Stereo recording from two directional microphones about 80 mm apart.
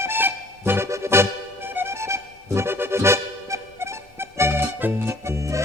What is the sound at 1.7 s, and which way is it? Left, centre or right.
Music, right.